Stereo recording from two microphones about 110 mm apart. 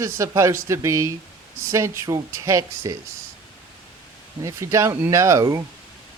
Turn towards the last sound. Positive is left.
turn(degrees=-25)  # may be behind; listen again after turning